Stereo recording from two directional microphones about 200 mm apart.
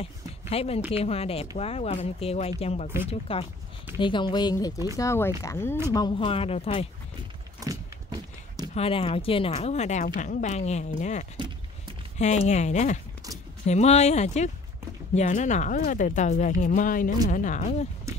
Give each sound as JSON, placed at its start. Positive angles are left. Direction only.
{"t": 0.0, "sound": "a sound", "side_deg": 30}
{"t": 0.9, "sound": "speech", "side_deg": 30}
{"t": 7.6, "sound": "horse", "side_deg": -20}
{"t": 8.7, "sound": "speech", "side_deg": 30}